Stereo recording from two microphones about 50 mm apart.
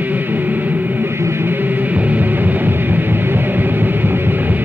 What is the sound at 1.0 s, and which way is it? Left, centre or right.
Music, right.